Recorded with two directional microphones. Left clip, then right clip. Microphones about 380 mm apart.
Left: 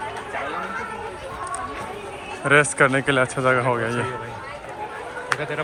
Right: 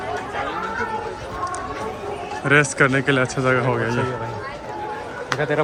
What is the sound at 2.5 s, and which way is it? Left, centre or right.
Speech, centre.